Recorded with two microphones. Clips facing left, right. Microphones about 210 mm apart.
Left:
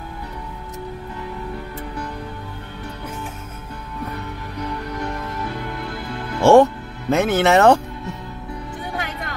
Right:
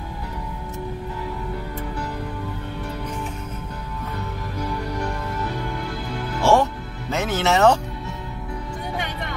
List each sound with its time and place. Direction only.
6.4 s music: 55° left (ahead or behind)